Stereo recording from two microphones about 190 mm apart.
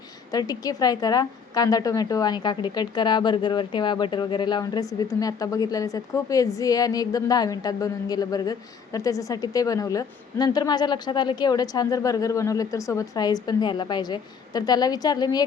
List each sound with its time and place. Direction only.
0.3 s a woman's voice: 20° left (ahead or behind)